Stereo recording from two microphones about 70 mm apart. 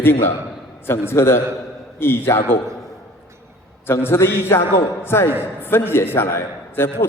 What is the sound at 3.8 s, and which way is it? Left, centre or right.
A man's voice, left.